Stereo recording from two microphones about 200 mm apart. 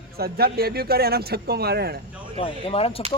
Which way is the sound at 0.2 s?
50° right (ahead or behind).